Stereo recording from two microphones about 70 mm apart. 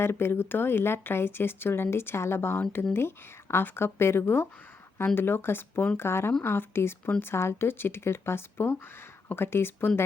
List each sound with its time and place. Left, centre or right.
0.0 s speech: left
6.0 s speech: left